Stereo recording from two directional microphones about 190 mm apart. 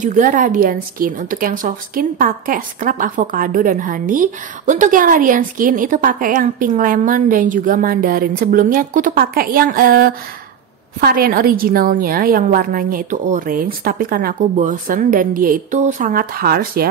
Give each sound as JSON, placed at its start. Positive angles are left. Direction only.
{"t": 0.0, "sound": "a woman's voice", "side_deg": -45}